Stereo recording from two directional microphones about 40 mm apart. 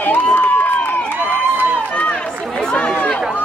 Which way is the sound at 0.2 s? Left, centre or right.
Left.